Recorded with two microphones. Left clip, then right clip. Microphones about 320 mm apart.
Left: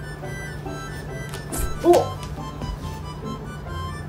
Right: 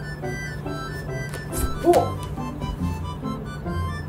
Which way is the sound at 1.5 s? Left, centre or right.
Centre.